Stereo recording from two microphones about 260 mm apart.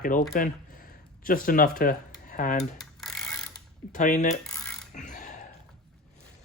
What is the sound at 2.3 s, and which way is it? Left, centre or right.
Cutlery, left.